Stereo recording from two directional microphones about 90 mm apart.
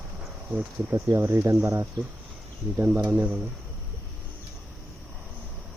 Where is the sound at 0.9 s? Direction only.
40° right (ahead or behind).